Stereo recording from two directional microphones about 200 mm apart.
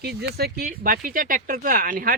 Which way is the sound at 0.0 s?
55° right (ahead or behind).